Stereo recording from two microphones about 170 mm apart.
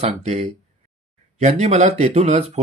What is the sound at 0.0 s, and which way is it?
Speech, 40° right (ahead or behind).